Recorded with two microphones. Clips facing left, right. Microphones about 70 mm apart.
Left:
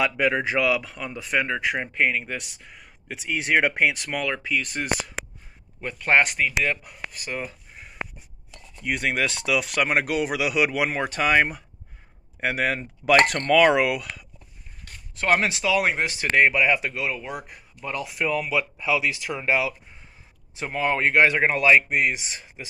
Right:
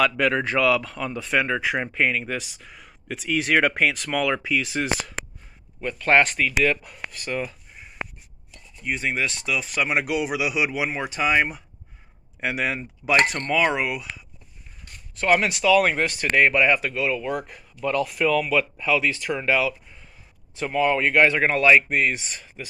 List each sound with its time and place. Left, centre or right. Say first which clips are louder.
0.0 s speech: right 1 dB; centre
5.9 s speech: right 1 dB; centre
8.5 s speech: left 1 dB; left
9.8 s speech: left 1 dB; left
15.1 s speech: right 1 dB; left
17.3 s speech: right 6 dB; centre